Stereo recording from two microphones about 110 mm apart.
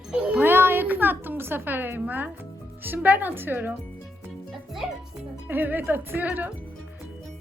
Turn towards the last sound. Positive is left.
turn(degrees=-15)  # may be behind; listen again after turning